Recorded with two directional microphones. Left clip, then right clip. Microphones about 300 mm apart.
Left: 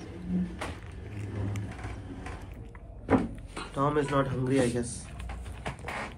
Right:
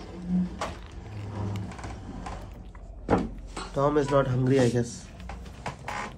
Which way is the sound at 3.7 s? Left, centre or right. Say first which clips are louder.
Right 4 dB; right.